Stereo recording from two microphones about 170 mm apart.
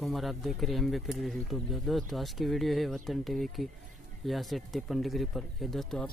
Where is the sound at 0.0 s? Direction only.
Centre (ahead or behind).